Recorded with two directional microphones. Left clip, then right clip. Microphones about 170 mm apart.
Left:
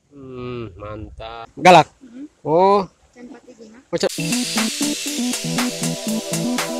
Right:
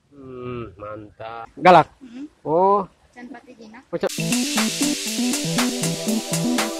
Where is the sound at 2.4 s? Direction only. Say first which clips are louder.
Left 3 dB; 30° left (ahead or behind).